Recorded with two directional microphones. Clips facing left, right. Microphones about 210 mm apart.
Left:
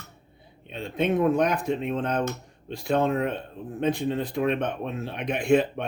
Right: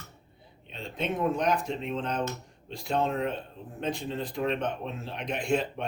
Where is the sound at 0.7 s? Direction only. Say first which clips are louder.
Left 7 dB; 60° left (ahead or behind).